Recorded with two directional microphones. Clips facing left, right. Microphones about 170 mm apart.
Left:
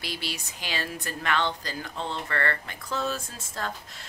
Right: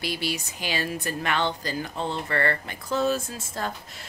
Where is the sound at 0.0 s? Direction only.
5° right (ahead or behind).